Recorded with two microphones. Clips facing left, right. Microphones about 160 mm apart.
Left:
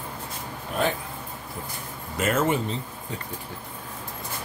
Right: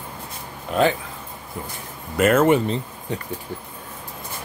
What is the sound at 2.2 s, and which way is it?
Speech, 60° right (ahead or behind).